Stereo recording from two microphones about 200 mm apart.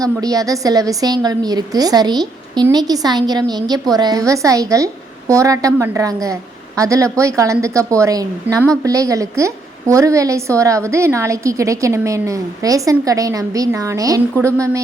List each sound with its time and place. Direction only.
0.0 s a woman's voice: 20° right (ahead or behind)